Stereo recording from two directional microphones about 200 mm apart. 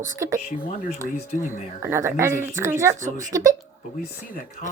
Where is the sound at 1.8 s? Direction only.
15° right (ahead or behind).